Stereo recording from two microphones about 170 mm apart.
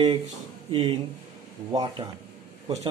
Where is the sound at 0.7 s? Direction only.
35° right (ahead or behind).